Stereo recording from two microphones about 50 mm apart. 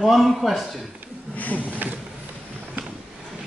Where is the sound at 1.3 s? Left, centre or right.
Left.